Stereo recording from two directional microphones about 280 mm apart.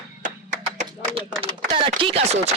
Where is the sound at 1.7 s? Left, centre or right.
Centre.